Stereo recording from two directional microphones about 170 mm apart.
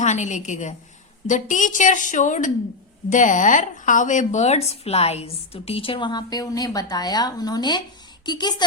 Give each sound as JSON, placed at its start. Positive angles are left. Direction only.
{"t": 0.0, "sound": "a woman's voice", "side_deg": 45}